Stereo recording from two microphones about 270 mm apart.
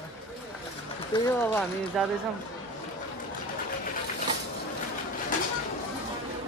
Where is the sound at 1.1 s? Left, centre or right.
Centre.